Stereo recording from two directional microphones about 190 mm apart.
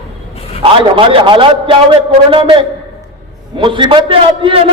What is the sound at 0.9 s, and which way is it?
A man's voice, 25° right (ahead or behind).